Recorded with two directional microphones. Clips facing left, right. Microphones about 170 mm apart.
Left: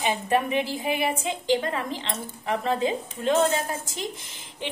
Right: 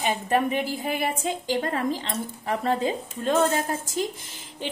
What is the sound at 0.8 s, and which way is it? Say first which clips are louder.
A woman's voice: left 1 dB; 45° right (ahead or behind).